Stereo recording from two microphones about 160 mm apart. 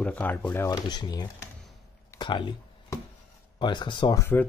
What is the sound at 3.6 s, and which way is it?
Speech, 30° left (ahead or behind).